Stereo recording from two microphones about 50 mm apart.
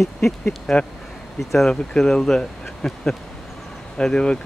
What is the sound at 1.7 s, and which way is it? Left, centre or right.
Speech, centre.